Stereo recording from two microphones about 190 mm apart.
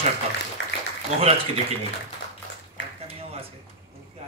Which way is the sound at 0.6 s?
80° left.